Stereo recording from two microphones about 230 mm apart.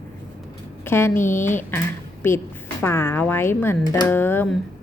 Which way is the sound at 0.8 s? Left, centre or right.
Centre.